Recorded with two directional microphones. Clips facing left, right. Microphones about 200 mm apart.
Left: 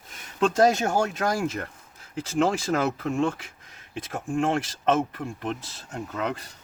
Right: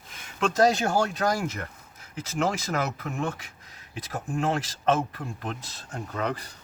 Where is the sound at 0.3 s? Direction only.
25° left (ahead or behind).